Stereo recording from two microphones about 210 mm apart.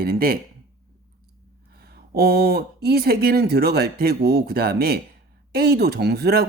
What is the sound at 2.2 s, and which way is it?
Speech, 45° right (ahead or behind).